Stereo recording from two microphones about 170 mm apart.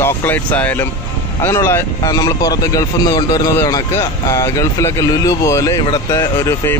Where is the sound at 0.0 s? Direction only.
10° left (ahead or behind).